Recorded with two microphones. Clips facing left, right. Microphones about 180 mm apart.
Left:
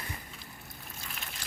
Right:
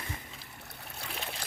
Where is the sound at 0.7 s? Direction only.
70° right (ahead or behind).